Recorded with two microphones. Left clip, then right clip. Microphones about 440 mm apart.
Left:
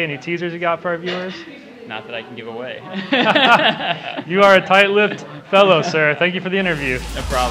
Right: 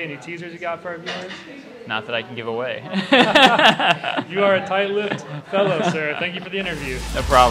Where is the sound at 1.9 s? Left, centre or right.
Right.